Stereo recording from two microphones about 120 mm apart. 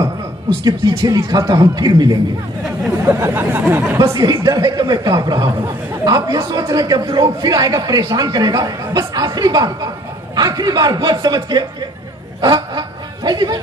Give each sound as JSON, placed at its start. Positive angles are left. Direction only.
{"t": 0.7, "sound": "speech", "side_deg": -30}
{"t": 3.1, "sound": "speech", "side_deg": -20}
{"t": 12.4, "sound": "a sound", "side_deg": -40}